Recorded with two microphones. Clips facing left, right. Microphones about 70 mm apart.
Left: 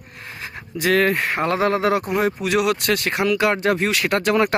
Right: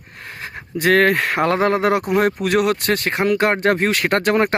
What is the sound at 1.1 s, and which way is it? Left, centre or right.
Speech, right.